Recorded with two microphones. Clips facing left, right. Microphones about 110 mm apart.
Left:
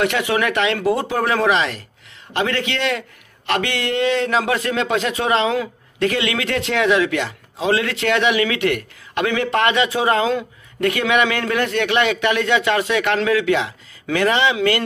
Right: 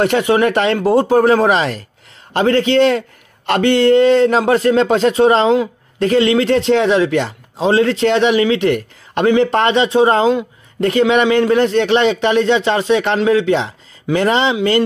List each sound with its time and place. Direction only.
0.0 s a man's voice: 35° right (ahead or behind)